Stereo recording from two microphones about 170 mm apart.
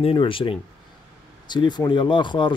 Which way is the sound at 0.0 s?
30° left (ahead or behind).